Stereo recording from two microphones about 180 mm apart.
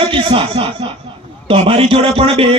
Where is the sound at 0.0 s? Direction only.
30° right (ahead or behind).